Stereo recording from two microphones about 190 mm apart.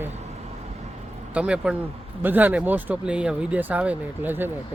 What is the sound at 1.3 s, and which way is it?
Speech, 5° right (ahead or behind).